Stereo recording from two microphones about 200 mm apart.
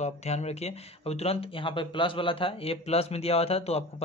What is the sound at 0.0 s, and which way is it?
Speech, 35° left (ahead or behind).